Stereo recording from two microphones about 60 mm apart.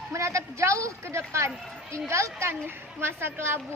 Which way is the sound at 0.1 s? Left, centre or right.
Right.